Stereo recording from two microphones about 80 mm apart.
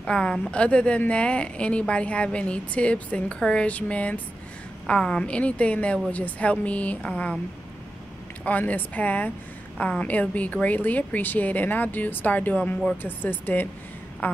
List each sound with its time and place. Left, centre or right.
0.0 s a woman's voice: centre
8.5 s a woman's voice: centre